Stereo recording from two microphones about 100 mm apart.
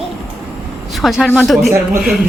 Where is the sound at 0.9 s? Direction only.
Centre (ahead or behind).